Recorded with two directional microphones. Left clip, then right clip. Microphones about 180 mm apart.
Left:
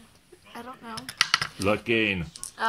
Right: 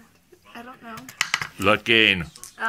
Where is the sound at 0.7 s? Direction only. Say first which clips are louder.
Left 3 dB; centre (ahead or behind).